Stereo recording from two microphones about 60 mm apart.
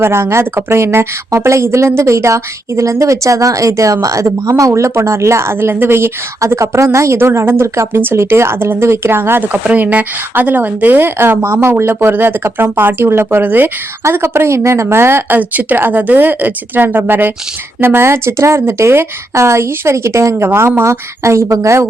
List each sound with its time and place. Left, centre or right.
0.0 s speech: right
6.5 s speech: right
9.5 s speech: right
14.0 s speech: right
15.4 s speech: right
20.5 s speech: right
21.2 s speech: right